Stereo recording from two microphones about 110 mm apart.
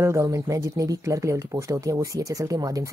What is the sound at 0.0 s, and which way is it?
Speech, 25° right (ahead or behind).